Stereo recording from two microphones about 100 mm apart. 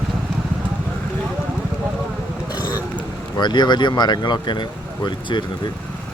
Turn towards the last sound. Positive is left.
turn(degrees=50)  # may be behind; listen again after turning